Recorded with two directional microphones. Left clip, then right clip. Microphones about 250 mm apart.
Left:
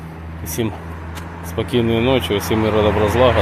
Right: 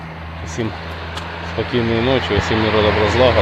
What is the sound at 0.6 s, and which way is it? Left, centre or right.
Speech, centre.